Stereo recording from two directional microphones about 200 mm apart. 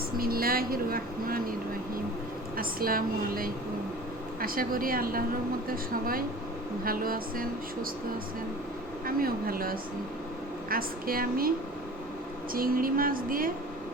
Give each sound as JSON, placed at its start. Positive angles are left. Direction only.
{"t": 0.2, "sound": "speech", "side_deg": -45}
{"t": 2.6, "sound": "speech", "side_deg": -45}
{"t": 9.0, "sound": "speech", "side_deg": -45}
{"t": 12.5, "sound": "speech", "side_deg": -45}